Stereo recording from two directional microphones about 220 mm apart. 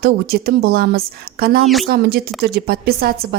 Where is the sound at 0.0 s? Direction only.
45° right (ahead or behind).